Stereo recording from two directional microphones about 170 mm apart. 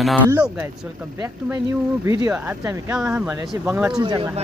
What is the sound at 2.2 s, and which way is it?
Speech, 15° right (ahead or behind).